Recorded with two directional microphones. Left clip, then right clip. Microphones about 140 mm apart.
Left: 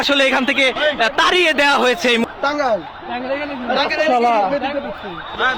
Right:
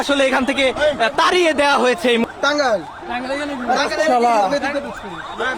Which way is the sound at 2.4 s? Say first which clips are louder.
Right 1 dB; 65° right (ahead or behind).